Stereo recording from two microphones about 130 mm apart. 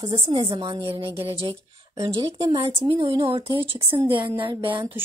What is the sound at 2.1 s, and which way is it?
A woman's voice, 45° right (ahead or behind).